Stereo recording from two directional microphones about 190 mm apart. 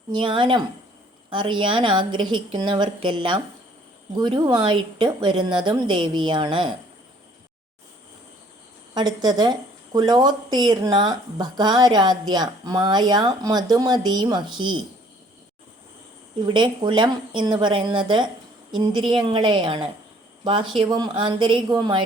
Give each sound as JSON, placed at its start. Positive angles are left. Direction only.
{"t": 0.1, "sound": "speech", "side_deg": -25}
{"t": 9.0, "sound": "speech", "side_deg": -20}
{"t": 16.5, "sound": "speech", "side_deg": -25}